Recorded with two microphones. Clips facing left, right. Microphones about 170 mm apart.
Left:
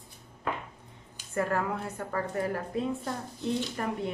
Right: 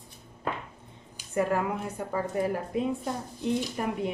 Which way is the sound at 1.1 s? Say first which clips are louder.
Right 3 dB; 15° right (ahead or behind).